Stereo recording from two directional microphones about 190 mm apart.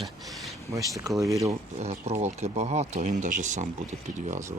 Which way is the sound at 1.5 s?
35° right (ahead or behind).